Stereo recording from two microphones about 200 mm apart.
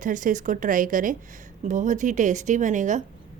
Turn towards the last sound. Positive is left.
turn(degrees=-40)  # may be behind; listen again after turning